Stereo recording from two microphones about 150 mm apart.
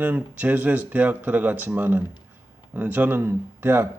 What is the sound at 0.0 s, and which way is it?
A man's voice, 10° right (ahead or behind).